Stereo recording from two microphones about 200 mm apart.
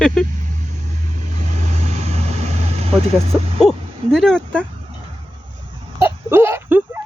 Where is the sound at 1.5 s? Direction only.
35° right (ahead or behind).